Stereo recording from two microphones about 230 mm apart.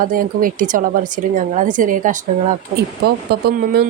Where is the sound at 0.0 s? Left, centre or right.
Right.